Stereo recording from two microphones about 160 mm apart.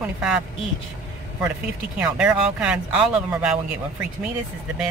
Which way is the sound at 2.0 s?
5° right (ahead or behind).